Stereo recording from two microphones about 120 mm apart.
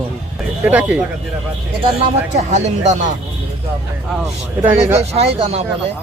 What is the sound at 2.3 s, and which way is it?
Speech, 75° right (ahead or behind).